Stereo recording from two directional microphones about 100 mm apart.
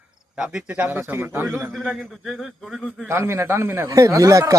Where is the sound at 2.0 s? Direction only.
Centre (ahead or behind).